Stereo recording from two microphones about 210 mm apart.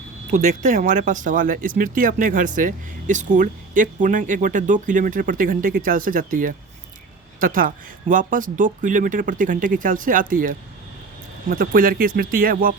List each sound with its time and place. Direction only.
0.3 s speech: 35° right (ahead or behind)